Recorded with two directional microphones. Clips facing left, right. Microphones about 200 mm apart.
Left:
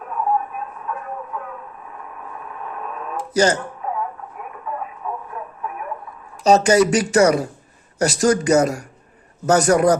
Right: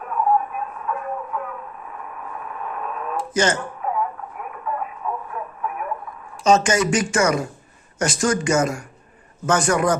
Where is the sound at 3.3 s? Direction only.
40° left (ahead or behind).